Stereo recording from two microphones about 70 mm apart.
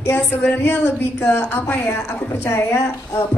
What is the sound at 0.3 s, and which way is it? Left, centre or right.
A woman's voice, left.